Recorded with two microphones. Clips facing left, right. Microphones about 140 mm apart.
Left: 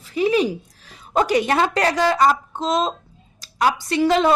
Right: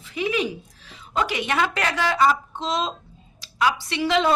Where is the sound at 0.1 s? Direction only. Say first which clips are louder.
Left 6 dB; 35° left (ahead or behind).